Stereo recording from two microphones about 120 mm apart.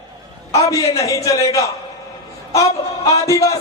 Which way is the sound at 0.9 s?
30° left (ahead or behind).